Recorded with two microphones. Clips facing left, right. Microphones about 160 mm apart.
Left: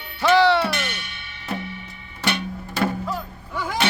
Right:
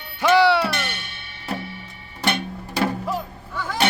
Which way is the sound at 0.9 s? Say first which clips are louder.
Even; 50° right (ahead or behind).